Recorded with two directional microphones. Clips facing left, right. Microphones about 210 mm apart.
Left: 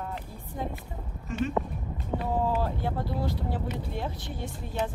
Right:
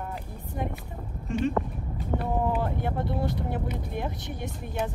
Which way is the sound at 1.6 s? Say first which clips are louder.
Right 1 dB; 10° left (ahead or behind).